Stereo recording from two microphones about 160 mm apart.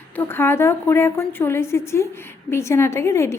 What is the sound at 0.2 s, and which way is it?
A woman's voice, 15° left (ahead or behind).